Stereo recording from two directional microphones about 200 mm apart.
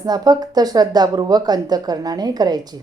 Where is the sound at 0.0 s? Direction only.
20° right (ahead or behind).